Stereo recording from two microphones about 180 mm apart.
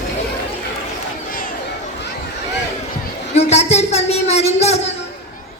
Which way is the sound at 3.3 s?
40° left (ahead or behind).